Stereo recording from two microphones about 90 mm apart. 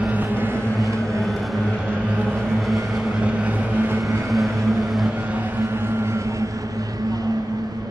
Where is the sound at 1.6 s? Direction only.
15° right (ahead or behind).